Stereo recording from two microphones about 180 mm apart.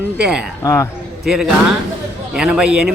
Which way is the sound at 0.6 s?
15° left (ahead or behind).